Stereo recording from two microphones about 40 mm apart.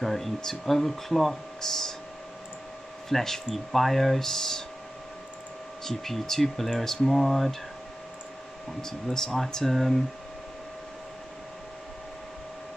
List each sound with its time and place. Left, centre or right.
0.0 s speech: centre
3.1 s speech: centre
5.9 s speech: centre
8.8 s speech: centre